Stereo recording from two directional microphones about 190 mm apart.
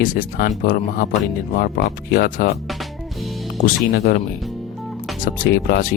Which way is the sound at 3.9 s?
55° left (ahead or behind).